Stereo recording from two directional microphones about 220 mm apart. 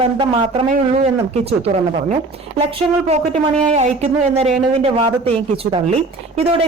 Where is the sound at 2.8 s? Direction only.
30° right (ahead or behind).